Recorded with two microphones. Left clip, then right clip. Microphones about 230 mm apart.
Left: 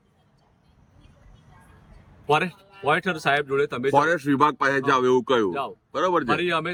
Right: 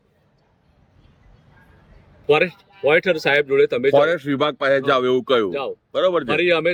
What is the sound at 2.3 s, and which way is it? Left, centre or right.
Speech, centre.